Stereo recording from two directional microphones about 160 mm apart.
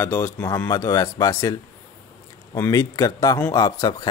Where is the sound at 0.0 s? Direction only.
15° left (ahead or behind).